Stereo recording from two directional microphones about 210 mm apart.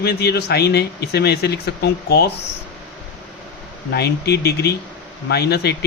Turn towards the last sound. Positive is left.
turn(degrees=50)  # may be behind; listen again after turning